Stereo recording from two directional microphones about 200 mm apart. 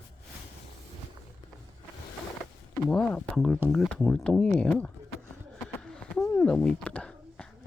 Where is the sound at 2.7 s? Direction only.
5° left (ahead or behind).